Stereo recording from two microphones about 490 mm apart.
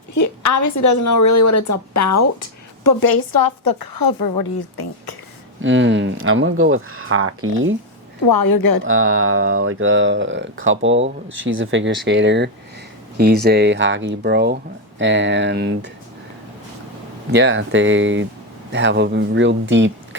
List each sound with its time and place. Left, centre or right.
0.1 s speech: left
5.6 s speech: right
8.3 s speech: left
8.9 s speech: right
17.3 s speech: right